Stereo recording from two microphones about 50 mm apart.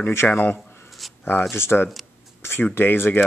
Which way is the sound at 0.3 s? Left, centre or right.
Left.